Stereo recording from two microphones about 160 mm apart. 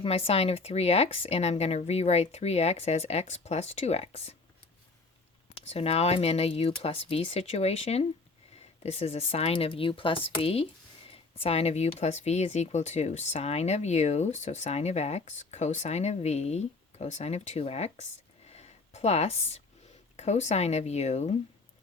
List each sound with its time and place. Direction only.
0.0 s speech: 35° left (ahead or behind)
5.5 s speech: 40° left (ahead or behind)
18.4 s a sound: 40° left (ahead or behind)
20.1 s speech: 45° left (ahead or behind)